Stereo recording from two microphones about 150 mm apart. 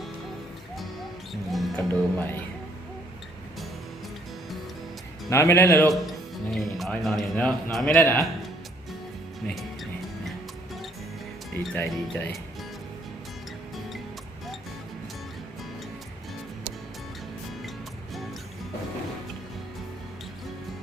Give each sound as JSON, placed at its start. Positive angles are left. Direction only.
{"t": 1.3, "sound": "speech", "side_deg": 0}
{"t": 1.9, "sound": "speech", "side_deg": 10}
{"t": 5.3, "sound": "speech", "side_deg": 15}
{"t": 5.9, "sound": "speech", "side_deg": 0}
{"t": 11.6, "sound": "speech", "side_deg": 5}